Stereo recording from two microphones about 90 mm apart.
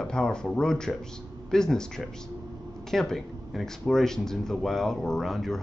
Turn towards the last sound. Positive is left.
turn(degrees=5)  # may be behind; listen again after turning